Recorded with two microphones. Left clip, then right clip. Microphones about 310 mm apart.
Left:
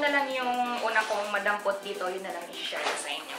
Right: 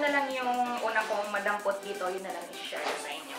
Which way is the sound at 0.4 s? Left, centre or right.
Centre.